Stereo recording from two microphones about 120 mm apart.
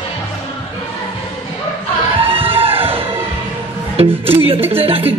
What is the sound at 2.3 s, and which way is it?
Music, 50° right (ahead or behind).